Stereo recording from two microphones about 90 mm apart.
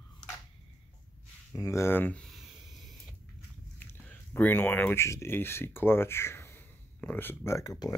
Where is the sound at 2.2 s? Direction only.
Centre (ahead or behind).